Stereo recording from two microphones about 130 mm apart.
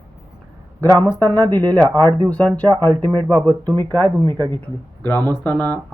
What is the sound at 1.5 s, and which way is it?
Speech, 15° left (ahead or behind).